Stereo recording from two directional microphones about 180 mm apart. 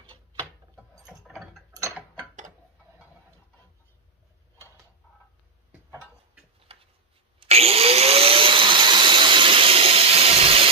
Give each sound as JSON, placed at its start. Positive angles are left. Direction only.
{"t": 1.2, "sound": "mechanisms", "side_deg": 0}
{"t": 1.8, "sound": "mechanisms", "side_deg": -15}
{"t": 6.7, "sound": "a sound", "side_deg": -35}
{"t": 7.3, "sound": "vacuum cleaner", "side_deg": -35}